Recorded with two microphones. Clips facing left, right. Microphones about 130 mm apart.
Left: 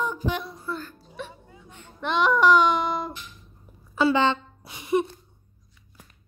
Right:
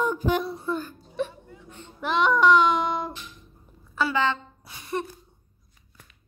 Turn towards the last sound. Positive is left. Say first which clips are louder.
# left 7 dB
turn(degrees=15)  # may be behind; listen again after turning